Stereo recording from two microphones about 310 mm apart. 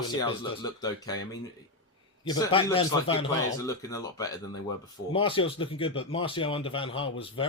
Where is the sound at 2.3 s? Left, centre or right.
Centre.